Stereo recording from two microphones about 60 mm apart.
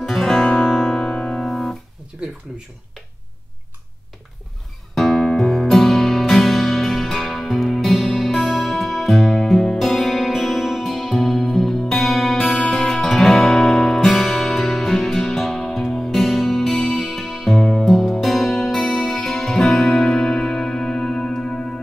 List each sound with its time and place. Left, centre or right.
0.0 s guitar: centre
4.9 s music: centre